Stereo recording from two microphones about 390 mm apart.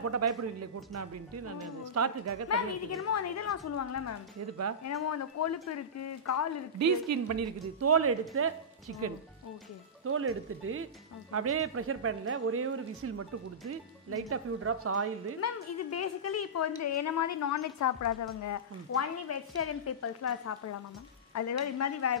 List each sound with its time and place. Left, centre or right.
0.0 s a man's voice: right
3.1 s a woman's voice: left
6.8 s a man's voice: right
14.3 s a man's voice: right
15.4 s a woman's voice: left